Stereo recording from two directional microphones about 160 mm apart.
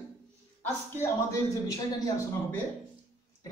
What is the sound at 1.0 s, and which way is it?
A man's voice, 20° left (ahead or behind).